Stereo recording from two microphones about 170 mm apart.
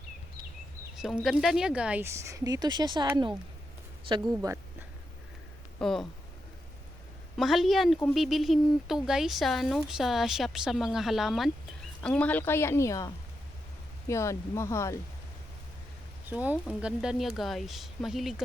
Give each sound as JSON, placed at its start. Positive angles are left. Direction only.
{"t": 0.9, "sound": "speech", "side_deg": -5}
{"t": 4.1, "sound": "a woman's voice", "side_deg": -25}
{"t": 5.8, "sound": "speech", "side_deg": 0}
{"t": 7.3, "sound": "a woman's voice", "side_deg": 0}
{"t": 16.3, "sound": "speech", "side_deg": -10}